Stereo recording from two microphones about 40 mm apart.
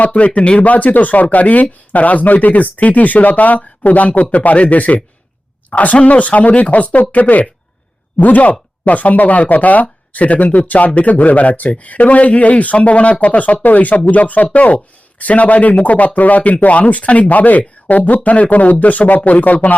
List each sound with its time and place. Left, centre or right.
0.0 s speech: left